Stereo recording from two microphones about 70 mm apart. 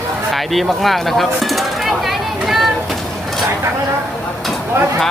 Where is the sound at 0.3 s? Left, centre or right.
Centre.